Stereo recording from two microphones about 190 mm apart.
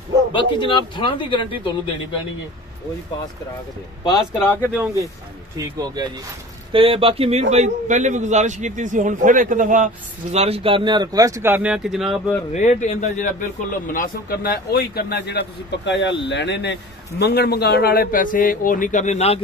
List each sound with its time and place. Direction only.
0.3 s speech: 25° left (ahead or behind)
5.6 s a man's voice: 20° right (ahead or behind); by 9.8 s 45° right (ahead or behind)
10.3 s speech: 35° right (ahead or behind); by 12.4 s centre (ahead or behind)
12.5 s a man's voice: 40° left (ahead or behind)